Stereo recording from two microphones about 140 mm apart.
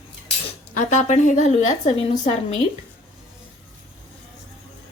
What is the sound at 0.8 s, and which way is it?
A woman's voice, 55° left (ahead or behind).